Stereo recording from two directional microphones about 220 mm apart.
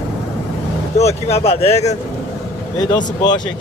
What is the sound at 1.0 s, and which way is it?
Speech, 30° left (ahead or behind).